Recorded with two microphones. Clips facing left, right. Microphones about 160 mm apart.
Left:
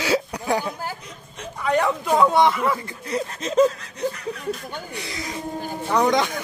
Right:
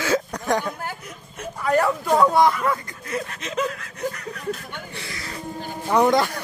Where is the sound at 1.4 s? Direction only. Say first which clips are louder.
Right 1 dB; 5° right (ahead or behind).